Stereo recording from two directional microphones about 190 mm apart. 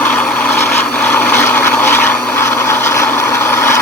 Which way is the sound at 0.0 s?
10° left (ahead or behind).